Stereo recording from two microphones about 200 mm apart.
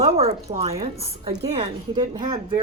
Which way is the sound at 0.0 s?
30° right (ahead or behind).